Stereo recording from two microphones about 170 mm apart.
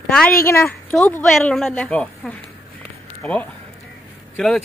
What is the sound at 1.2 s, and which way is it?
A woman's voice, centre (ahead or behind).